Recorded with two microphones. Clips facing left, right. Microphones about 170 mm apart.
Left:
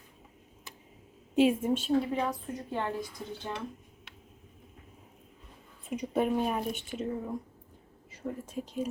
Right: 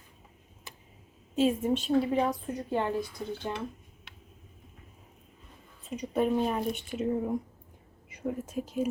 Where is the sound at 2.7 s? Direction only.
15° right (ahead or behind).